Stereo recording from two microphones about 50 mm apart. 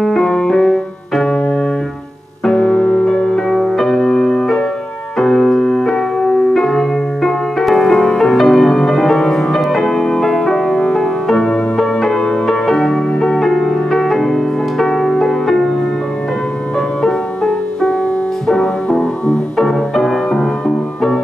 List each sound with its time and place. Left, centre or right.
0.0 s piano: centre
2.4 s music: centre
5.2 s piano: centre
10.2 s music: centre
17.0 s music: centre
19.6 s music: centre